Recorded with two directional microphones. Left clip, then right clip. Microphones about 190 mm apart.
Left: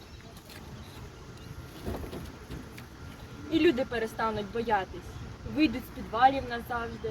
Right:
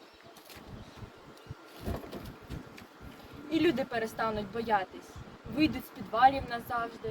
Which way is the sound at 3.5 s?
35° right (ahead or behind).